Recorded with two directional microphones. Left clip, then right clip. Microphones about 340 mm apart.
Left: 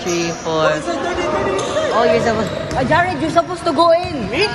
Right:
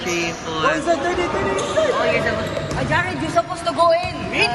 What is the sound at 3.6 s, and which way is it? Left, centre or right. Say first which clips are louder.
Speech: left 3 dB; left.